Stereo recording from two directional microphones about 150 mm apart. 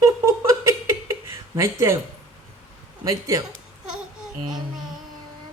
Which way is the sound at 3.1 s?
20° right (ahead or behind).